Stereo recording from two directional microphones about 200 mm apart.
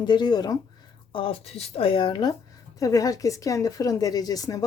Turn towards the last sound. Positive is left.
turn(degrees=20)  # may be behind; listen again after turning